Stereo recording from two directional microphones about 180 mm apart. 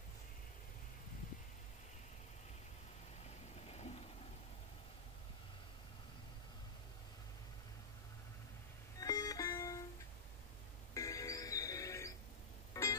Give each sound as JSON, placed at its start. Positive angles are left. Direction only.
{"t": 3.6, "sound": "vehicle", "side_deg": 35}
{"t": 9.0, "sound": "music", "side_deg": 20}
{"t": 11.0, "sound": "music", "side_deg": 15}